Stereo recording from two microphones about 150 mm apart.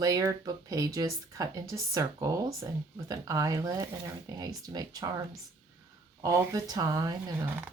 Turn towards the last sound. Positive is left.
turn(degrees=-25)  # may be behind; listen again after turning